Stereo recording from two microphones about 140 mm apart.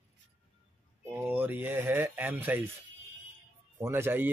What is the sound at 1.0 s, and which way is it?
Speech, 15° right (ahead or behind).